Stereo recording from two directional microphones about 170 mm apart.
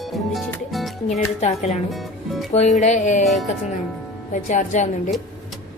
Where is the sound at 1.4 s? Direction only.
40° left (ahead or behind).